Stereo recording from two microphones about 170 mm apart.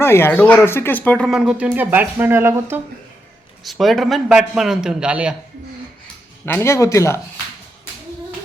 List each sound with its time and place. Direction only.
0.0 s speech: 15° left (ahead or behind)
1.3 s speech: 5° right (ahead or behind)
3.6 s a man's voice: centre (ahead or behind)
6.4 s speech: 15° left (ahead or behind)